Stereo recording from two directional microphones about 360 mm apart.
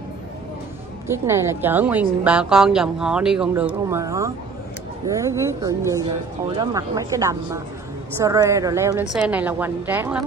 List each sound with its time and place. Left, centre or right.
1.0 s a woman's voice: centre